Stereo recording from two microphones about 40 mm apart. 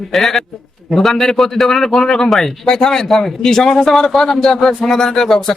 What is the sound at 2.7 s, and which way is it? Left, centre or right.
Speech, centre.